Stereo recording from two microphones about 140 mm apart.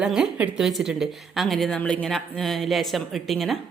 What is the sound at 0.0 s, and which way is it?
A woman's voice, 5° right (ahead or behind).